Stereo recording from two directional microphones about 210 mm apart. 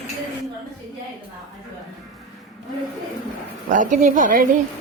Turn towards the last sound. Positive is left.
turn(degrees=-40)  # may be behind; listen again after turning